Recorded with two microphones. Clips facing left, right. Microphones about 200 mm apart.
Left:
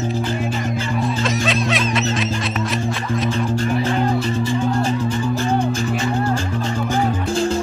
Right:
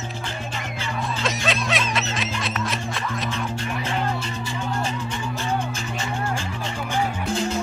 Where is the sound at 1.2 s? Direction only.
Centre (ahead or behind).